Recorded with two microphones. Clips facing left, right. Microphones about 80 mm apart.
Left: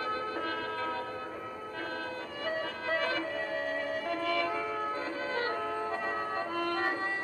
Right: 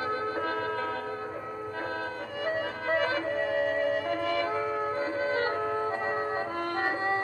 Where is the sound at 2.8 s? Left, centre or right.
Right.